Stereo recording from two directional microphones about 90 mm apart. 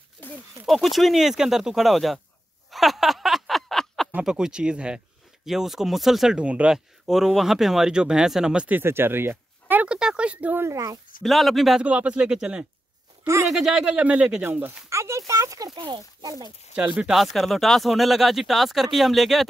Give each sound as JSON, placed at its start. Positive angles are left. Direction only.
{"t": 0.7, "sound": "speech", "side_deg": 0}
{"t": 2.7, "sound": "a sound", "side_deg": 0}
{"t": 4.2, "sound": "speech", "side_deg": -5}
{"t": 8.6, "sound": "speech", "side_deg": -25}
{"t": 10.6, "sound": "speech", "side_deg": -35}
{"t": 11.2, "sound": "speech", "side_deg": 0}
{"t": 11.8, "sound": "speech", "side_deg": -15}
{"t": 15.7, "sound": "speech", "side_deg": -55}
{"t": 16.3, "sound": "speech", "side_deg": -45}
{"t": 16.7, "sound": "speech", "side_deg": -10}